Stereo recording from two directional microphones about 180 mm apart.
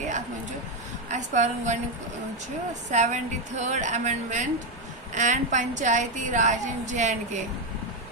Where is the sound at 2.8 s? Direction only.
40° right (ahead or behind).